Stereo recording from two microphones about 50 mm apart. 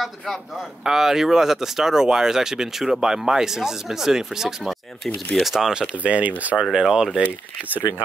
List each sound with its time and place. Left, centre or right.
0.0 s speech: centre
4.6 s speech: centre
6.0 s speech: right
6.5 s speech: centre